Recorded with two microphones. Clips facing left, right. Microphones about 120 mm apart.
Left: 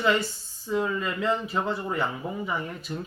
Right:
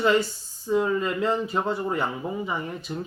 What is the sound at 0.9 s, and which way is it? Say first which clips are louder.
Speech: right 4 dB; 30° right (ahead or behind).